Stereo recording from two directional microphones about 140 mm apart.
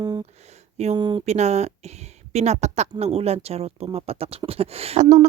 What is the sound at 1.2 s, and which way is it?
Speech, 55° right (ahead or behind).